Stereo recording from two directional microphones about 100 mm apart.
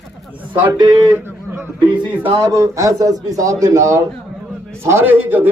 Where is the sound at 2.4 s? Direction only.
30° right (ahead or behind).